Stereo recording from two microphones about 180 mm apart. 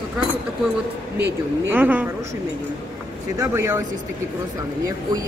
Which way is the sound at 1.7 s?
10° right (ahead or behind).